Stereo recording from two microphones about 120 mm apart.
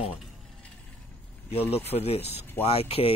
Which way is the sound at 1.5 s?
55° left (ahead or behind).